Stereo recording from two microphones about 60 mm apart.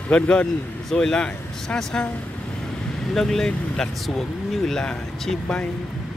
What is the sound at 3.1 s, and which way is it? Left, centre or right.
Speech, centre.